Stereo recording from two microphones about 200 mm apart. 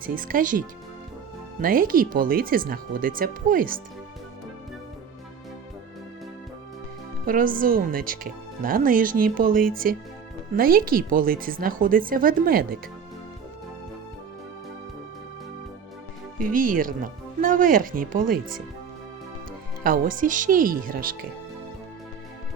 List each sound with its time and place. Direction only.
0.0 s speech: 45° right (ahead or behind)
1.6 s speech: 45° right (ahead or behind)
7.3 s speech: 45° right (ahead or behind)
16.4 s speech: 45° right (ahead or behind)
19.8 s speech: 45° right (ahead or behind)